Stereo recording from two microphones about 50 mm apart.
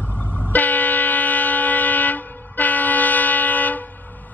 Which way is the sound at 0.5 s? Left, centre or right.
Left.